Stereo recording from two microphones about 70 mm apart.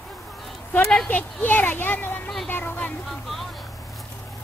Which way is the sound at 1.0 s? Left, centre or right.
Left.